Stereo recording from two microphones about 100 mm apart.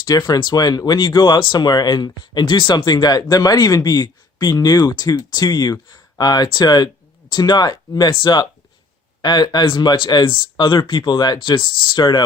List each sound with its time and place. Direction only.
0.0 s speech: 40° left (ahead or behind)